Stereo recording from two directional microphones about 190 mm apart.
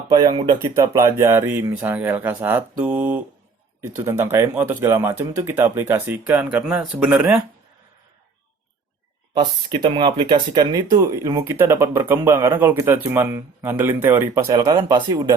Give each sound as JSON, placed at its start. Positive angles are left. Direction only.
{"t": 0.1, "sound": "speech", "side_deg": -20}
{"t": 9.3, "sound": "speech", "side_deg": -25}